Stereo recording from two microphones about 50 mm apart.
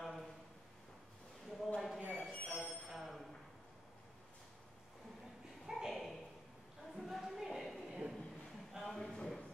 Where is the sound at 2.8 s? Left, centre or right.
Centre.